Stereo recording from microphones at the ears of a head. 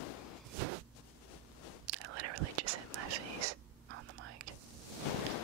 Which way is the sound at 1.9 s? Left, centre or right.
Right.